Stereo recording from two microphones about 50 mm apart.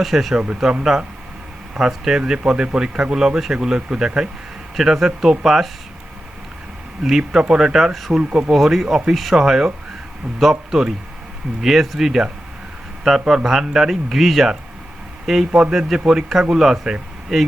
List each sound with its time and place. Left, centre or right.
0.0 s speech: centre
7.0 s speech: centre
8.2 s speech: right
8.5 s speech: centre